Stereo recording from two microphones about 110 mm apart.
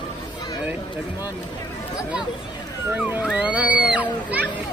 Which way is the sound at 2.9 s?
15° right (ahead or behind).